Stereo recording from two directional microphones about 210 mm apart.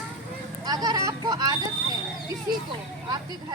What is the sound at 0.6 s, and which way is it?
Vehicle, 20° right (ahead or behind).